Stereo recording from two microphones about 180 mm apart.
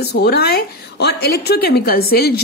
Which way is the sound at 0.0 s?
60° left (ahead or behind).